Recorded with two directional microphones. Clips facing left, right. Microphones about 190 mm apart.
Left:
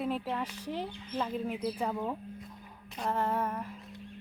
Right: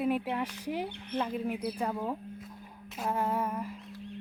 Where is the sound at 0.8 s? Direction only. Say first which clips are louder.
Right 1 dB; 65° right (ahead or behind).